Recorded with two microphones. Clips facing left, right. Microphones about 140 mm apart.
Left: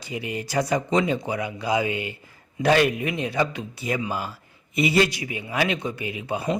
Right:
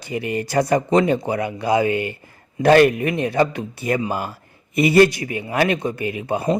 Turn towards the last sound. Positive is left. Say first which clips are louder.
# right 5 dB
turn(degrees=-50)  # may be behind; listen again after turning